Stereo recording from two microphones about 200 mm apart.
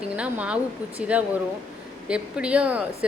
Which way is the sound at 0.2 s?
5° right (ahead or behind).